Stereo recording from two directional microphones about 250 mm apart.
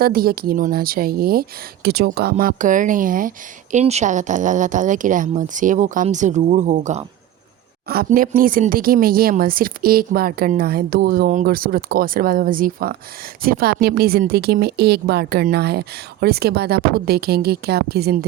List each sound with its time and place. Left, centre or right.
0.0 s speech: right